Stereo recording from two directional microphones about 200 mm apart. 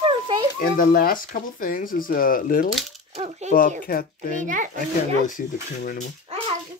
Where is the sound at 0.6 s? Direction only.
45° left (ahead or behind).